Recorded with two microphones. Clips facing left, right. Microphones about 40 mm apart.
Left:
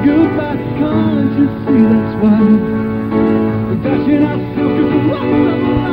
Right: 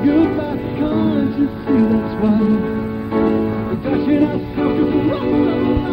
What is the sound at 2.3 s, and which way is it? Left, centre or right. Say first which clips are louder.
Music: left 6 dB; left.